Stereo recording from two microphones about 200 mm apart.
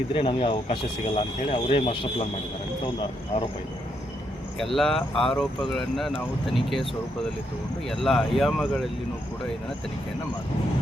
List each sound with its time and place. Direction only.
0.1 s speech: 25° left (ahead or behind)
4.5 s speech: centre (ahead or behind)
7.9 s speech: centre (ahead or behind)